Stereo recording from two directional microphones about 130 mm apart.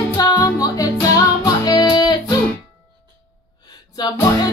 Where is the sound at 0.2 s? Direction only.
25° left (ahead or behind).